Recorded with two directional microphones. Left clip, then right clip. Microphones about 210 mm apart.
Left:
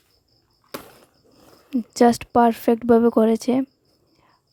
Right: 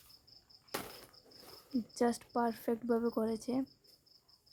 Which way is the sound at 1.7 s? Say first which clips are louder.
Left 17 dB; 45° left (ahead or behind).